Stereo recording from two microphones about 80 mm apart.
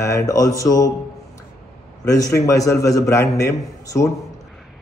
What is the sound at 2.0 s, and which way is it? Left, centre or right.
A man's voice, left.